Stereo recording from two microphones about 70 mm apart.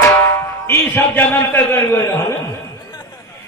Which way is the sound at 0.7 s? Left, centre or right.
Left.